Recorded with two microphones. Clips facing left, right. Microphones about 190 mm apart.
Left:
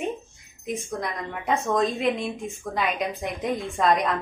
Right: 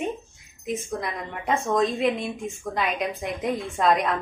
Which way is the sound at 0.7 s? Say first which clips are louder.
Right 1 dB; centre (ahead or behind).